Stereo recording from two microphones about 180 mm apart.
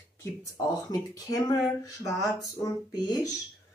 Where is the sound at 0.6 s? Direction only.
20° left (ahead or behind).